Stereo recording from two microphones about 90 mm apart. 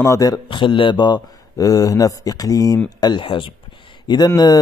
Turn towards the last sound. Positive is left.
turn(degrees=45)  # may be behind; listen again after turning